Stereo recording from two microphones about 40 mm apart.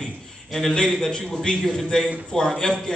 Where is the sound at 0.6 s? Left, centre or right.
Centre.